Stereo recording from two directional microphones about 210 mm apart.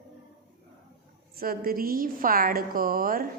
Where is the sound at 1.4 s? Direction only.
45° right (ahead or behind).